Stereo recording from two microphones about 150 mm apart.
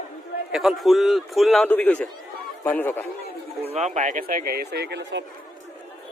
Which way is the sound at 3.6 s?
45° right (ahead or behind).